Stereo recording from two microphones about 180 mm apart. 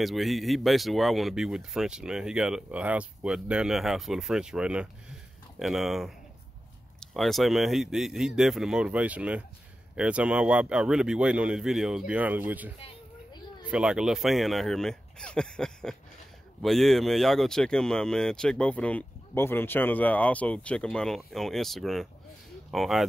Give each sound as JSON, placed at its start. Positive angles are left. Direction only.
{"t": 0.0, "sound": "speech", "side_deg": 0}
{"t": 12.8, "sound": "a sound", "side_deg": 25}
{"t": 13.7, "sound": "speech", "side_deg": -5}